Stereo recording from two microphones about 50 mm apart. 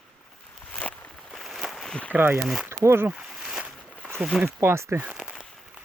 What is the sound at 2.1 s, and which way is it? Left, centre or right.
Speech, right.